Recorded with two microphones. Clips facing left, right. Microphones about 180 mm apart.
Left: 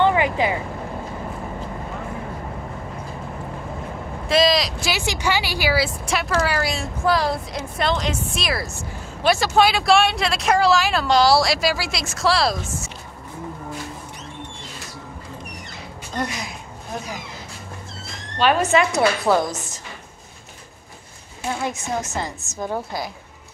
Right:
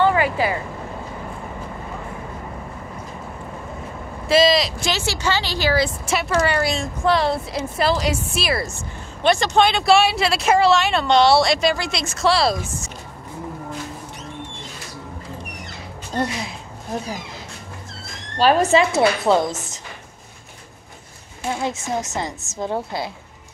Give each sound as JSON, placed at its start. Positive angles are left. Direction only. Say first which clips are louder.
{"t": 0.0, "sound": "vehicle", "louder": "even", "side_deg": 20}
{"t": 4.3, "sound": "speech", "louder": "right 2 dB", "side_deg": 0}
{"t": 4.9, "sound": "a woman's voice", "louder": "left 1 dB", "side_deg": 15}
{"t": 6.0, "sound": "speech", "louder": "right 2 dB", "side_deg": 0}
{"t": 16.2, "sound": "a woman's voice", "louder": "right 3 dB", "side_deg": -30}
{"t": 18.4, "sound": "a woman's voice", "louder": "right 2 dB", "side_deg": -35}
{"t": 21.5, "sound": "a woman's voice", "louder": "right 1 dB", "side_deg": -25}